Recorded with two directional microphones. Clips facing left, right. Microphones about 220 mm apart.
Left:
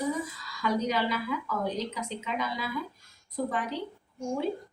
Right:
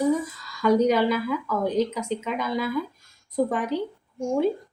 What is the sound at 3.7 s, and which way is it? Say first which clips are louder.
Speech: right 8 dB; 50° right (ahead or behind).